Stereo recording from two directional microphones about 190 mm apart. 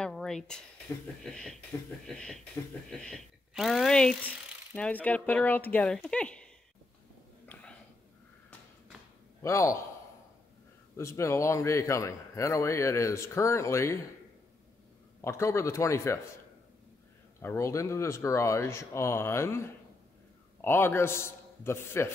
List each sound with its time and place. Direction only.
0.0 s a sound: 5° left (ahead or behind)
1.2 s a man's voice: 5° left (ahead or behind)
9.4 s a man's voice: 15° left (ahead or behind)
11.0 s a man's voice: 15° left (ahead or behind)
15.2 s a man's voice: 15° left (ahead or behind)
17.4 s a man's voice: 15° left (ahead or behind)